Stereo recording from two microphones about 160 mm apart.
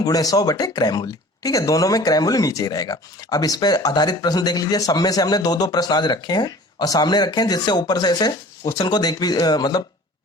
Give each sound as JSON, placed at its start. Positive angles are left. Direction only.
{"t": 0.0, "sound": "speech", "side_deg": 25}